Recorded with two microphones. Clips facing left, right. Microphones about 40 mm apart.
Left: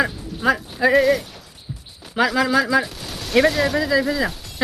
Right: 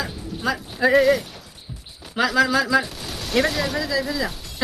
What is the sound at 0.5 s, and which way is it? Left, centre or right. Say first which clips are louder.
Speech: even; centre.